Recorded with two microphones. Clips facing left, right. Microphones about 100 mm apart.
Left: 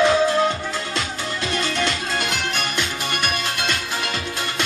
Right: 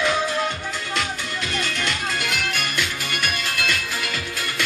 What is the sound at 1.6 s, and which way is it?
Music, 30° left (ahead or behind).